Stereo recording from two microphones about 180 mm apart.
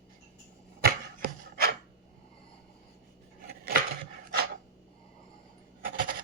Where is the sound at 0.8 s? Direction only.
55° right (ahead or behind).